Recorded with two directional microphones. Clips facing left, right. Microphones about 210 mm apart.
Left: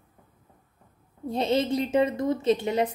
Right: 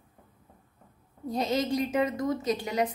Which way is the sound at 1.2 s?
25° left (ahead or behind).